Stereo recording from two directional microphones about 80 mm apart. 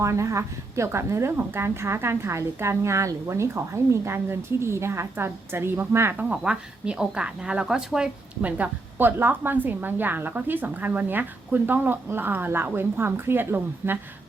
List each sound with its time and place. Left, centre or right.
0.0 s a woman's voice: right
6.3 s speech: centre
8.4 s a woman's voice: centre